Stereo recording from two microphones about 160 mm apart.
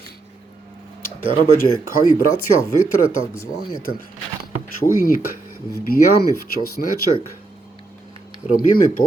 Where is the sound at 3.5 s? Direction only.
70° left (ahead or behind).